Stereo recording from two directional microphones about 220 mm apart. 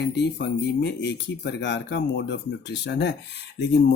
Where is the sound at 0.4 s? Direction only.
50° left (ahead or behind).